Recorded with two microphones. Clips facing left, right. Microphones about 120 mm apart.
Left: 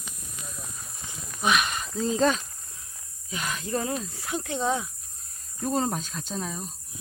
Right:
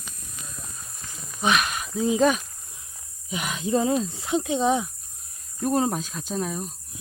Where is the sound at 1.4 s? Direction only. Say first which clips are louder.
Right 2 dB; centre (ahead or behind).